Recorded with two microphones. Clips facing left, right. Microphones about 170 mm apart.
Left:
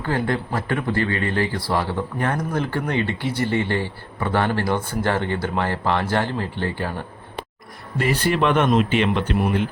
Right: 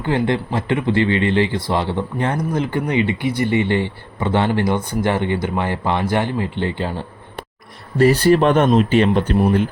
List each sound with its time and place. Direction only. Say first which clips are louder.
0.0 s speech: right 4 dB; 20° right (ahead or behind)
7.9 s speech: right 8 dB; 35° right (ahead or behind)